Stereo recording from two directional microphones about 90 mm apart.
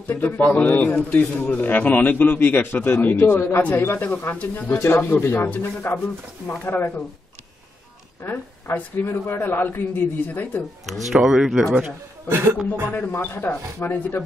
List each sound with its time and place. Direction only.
0.0 s a man's voice: 20° left (ahead or behind)
8.2 s a man's voice: 25° left (ahead or behind)
11.1 s speech: 5° right (ahead or behind)
12.3 s speech: 25° right (ahead or behind)
12.9 s a man's voice: 25° left (ahead or behind)